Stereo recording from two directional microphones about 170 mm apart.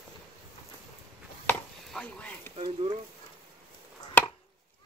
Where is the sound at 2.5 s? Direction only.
35° right (ahead or behind).